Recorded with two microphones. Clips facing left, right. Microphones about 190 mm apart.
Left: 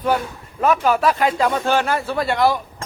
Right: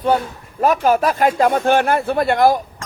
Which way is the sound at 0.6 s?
45° right (ahead or behind).